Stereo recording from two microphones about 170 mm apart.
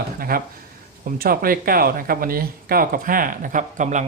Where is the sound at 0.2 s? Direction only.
60° right (ahead or behind).